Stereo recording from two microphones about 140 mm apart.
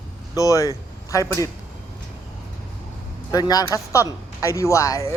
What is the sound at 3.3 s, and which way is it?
Speech, 25° left (ahead or behind).